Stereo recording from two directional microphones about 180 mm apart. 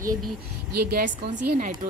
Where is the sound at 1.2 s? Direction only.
35° right (ahead or behind).